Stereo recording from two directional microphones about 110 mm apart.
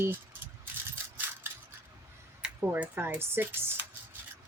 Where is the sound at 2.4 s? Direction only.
15° right (ahead or behind).